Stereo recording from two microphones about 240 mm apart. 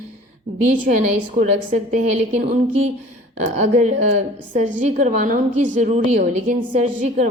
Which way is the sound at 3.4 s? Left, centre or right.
Right.